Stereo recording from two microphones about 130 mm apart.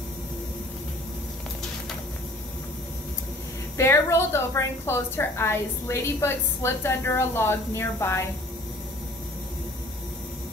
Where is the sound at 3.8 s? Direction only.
20° left (ahead or behind).